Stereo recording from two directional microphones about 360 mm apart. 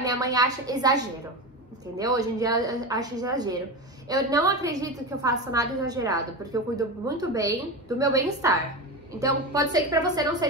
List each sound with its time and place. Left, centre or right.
0.0 s a woman's voice: centre